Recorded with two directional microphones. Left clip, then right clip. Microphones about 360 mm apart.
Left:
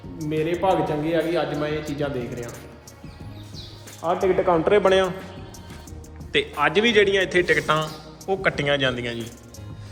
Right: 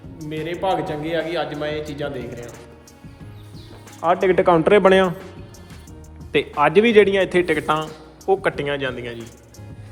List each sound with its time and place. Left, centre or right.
0.2 s a man's voice: centre
4.0 s speech: right
6.3 s a man's voice: centre